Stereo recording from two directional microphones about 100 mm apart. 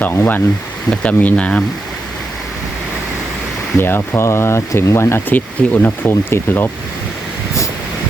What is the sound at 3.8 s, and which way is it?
Speech, 25° left (ahead or behind).